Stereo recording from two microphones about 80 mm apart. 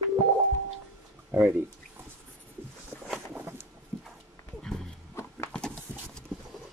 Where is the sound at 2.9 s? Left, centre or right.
Centre.